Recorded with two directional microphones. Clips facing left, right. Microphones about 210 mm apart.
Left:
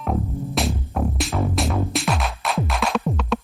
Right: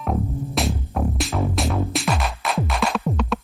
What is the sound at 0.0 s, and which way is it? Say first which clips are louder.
Music: even; centre (ahead or behind).